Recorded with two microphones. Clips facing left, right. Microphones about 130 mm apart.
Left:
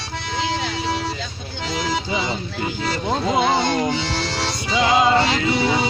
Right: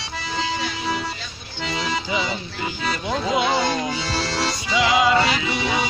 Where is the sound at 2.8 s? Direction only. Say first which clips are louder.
Left 2 dB; 30° left (ahead or behind).